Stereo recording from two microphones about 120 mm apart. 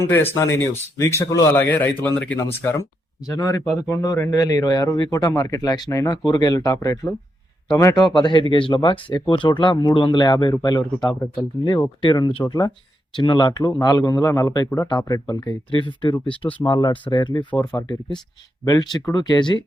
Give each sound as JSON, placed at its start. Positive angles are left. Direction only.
{"t": 0.1, "sound": "speech", "side_deg": 20}
{"t": 1.5, "sound": "a man's voice", "side_deg": 15}
{"t": 2.4, "sound": "speech", "side_deg": 25}
{"t": 8.0, "sound": "speech", "side_deg": 40}
{"t": 11.0, "sound": "speech", "side_deg": 5}
{"t": 11.6, "sound": "speech", "side_deg": 30}
{"t": 13.1, "sound": "speech", "side_deg": 40}